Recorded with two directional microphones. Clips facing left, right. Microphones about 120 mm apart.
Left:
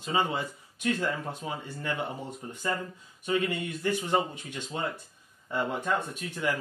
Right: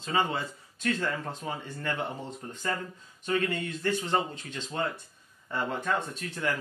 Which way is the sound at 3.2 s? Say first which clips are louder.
Even; 15° left (ahead or behind).